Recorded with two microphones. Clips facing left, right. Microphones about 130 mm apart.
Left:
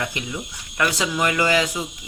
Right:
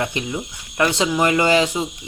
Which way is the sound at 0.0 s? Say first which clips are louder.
Right 4 dB; 30° right (ahead or behind).